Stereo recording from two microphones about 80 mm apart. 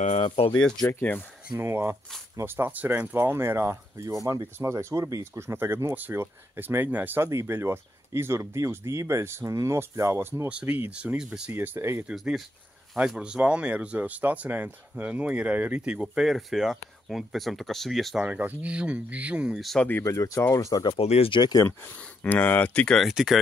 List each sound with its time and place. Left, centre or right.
0.5 s speech: centre
1.6 s speech: right
7.2 s speech: right
10.5 s speech: centre
11.5 s speech: right
12.0 s speech: centre
18.2 s speech: centre
19.5 s speech: centre
20.0 s speech: left
20.5 s speech: left
21.3 s speech: left
22.2 s speech: left
22.8 s speech: centre